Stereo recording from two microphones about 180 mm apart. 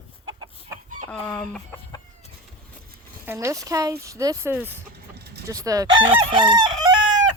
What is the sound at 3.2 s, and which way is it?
Speech, 15° right (ahead or behind).